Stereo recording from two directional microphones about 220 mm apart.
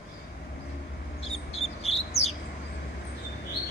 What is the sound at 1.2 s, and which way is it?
Bird, 25° left (ahead or behind).